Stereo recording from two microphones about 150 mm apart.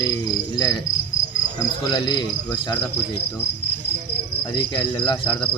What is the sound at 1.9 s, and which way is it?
Cricket, 30° left (ahead or behind).